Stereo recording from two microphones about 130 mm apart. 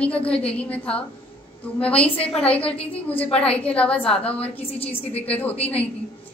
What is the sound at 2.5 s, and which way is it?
A woman's voice, 10° left (ahead or behind).